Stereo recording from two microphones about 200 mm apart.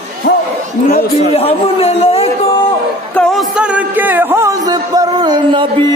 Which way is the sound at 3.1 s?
5° left (ahead or behind).